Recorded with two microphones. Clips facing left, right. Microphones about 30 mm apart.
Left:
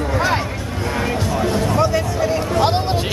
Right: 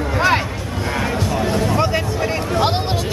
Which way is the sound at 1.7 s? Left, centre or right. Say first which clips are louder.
Left 1 dB; right.